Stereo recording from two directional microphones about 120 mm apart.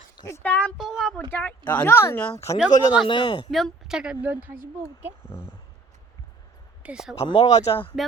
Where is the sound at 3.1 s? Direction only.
40° left (ahead or behind).